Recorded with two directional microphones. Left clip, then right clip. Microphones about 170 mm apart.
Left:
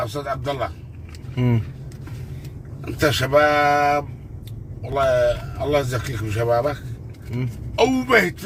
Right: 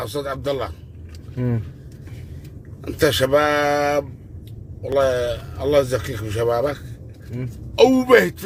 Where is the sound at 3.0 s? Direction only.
10° right (ahead or behind).